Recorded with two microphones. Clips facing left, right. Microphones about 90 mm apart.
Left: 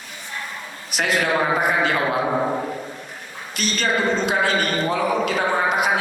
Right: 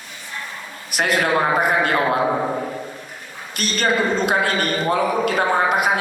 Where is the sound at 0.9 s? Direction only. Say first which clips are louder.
Right 2 dB; 50° right (ahead or behind).